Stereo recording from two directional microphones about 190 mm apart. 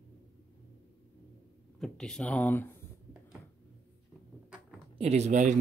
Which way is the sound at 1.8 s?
5° left (ahead or behind).